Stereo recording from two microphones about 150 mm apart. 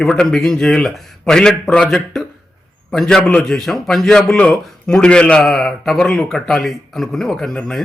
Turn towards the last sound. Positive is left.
turn(degrees=5)  # may be behind; listen again after turning